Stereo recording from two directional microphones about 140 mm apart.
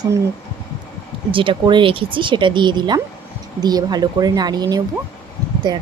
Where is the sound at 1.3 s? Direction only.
40° right (ahead or behind).